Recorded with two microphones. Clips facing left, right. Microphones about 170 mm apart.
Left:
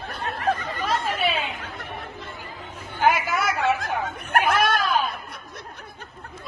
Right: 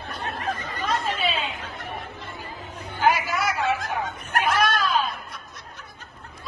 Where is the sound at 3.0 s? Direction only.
55° left (ahead or behind).